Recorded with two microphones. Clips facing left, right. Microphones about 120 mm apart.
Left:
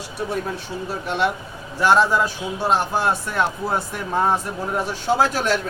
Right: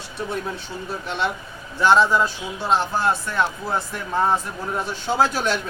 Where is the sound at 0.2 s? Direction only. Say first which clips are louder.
Left 2 dB; 5° left (ahead or behind).